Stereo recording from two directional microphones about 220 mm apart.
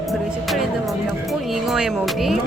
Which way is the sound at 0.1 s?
Centre (ahead or behind).